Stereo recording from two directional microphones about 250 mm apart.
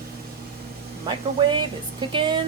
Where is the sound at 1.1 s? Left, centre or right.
Centre.